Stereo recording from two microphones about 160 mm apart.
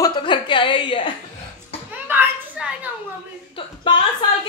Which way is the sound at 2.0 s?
10° right (ahead or behind).